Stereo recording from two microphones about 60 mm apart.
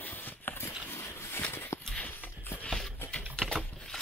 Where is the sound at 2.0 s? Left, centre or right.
Left.